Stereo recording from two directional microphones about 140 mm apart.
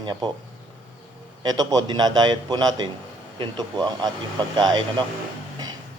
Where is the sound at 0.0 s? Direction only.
35° right (ahead or behind).